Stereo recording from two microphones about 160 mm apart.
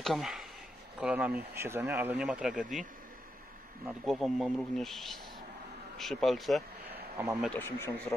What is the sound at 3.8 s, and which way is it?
Speech, centre (ahead or behind).